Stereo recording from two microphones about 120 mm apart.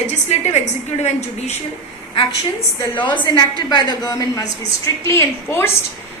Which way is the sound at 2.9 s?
40° left (ahead or behind).